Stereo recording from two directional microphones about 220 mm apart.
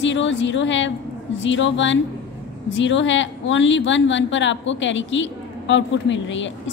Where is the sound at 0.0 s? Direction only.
55° left (ahead or behind).